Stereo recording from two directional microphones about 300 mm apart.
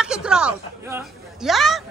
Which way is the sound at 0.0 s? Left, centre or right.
Centre.